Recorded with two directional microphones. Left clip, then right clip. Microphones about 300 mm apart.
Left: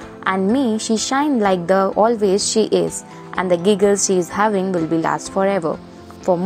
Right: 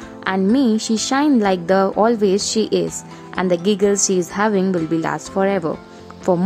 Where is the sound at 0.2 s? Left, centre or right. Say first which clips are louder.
Even; centre.